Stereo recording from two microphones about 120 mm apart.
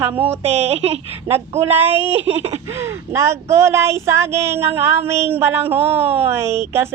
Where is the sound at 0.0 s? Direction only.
15° right (ahead or behind).